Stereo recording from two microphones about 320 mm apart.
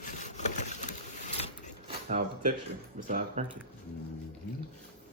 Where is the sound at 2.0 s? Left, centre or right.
Right.